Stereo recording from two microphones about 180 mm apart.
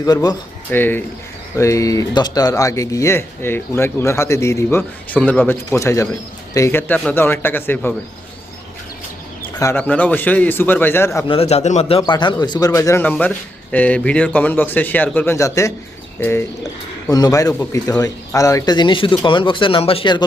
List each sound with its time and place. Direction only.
0.0 s speech: 20° left (ahead or behind)
0.8 s speech: 10° left (ahead or behind)
9.6 s speech: 15° left (ahead or behind)
11.3 s speech: 35° left (ahead or behind)